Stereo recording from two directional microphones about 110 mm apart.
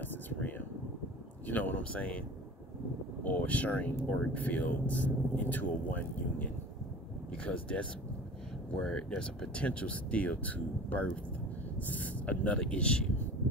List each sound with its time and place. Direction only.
0.0 s a sound: 15° left (ahead or behind)
1.5 s speech: 15° left (ahead or behind)
3.3 s speech: 15° left (ahead or behind)
8.8 s speech: 5° left (ahead or behind)